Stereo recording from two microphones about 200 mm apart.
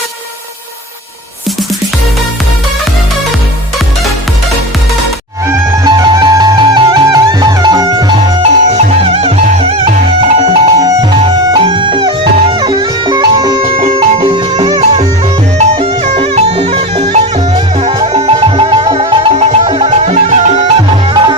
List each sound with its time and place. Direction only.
5.5 s music: 20° right (ahead or behind)
8.7 s music: 30° right (ahead or behind)
10.8 s music: 20° right (ahead or behind); by 20.7 s 35° right (ahead or behind)
20.9 s music: 20° right (ahead or behind)